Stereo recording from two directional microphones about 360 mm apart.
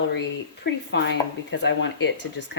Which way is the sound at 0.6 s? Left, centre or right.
Left.